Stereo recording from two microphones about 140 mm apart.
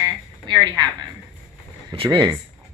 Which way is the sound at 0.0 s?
30° right (ahead or behind).